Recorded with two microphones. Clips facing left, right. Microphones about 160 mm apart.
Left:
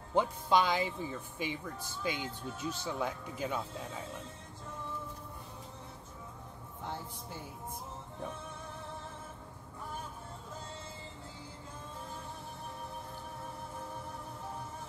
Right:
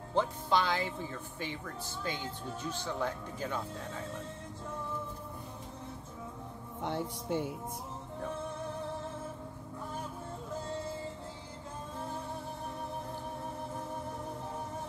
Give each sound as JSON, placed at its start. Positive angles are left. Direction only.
{"t": 0.1, "sound": "speech", "side_deg": 10}
{"t": 6.8, "sound": "a man's voice", "side_deg": -70}